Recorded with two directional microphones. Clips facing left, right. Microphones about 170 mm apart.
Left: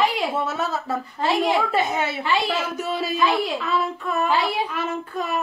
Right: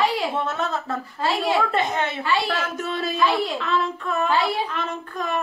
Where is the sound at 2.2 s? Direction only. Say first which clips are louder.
Left 1 dB; 20° left (ahead or behind).